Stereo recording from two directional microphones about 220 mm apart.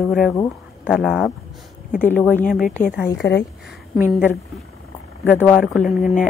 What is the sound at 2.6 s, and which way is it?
Speech, 35° left (ahead or behind).